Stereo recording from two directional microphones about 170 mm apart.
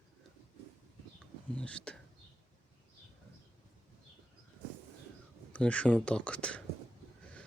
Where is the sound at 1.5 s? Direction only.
5° left (ahead or behind).